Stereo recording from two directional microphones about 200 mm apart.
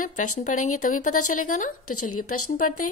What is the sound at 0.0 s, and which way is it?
Speech, 40° left (ahead or behind).